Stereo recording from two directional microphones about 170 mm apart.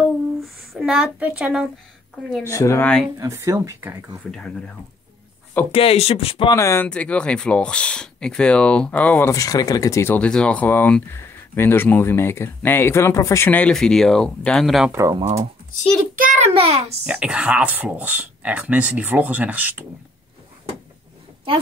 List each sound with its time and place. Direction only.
0.7 s a woman's voice: 5° right (ahead or behind)
2.5 s speech: 15° left (ahead or behind)
3.2 s speech: 20° right (ahead or behind)
4.3 s a woman's voice: 5° left (ahead or behind)
5.7 s speech: 35° left (ahead or behind)
6.5 s speech: 15° left (ahead or behind); by 14.9 s centre (ahead or behind)
14.9 s speech: 15° right (ahead or behind)
16.2 s a sound: 45° right (ahead or behind)
17.0 s speech: 5° right (ahead or behind)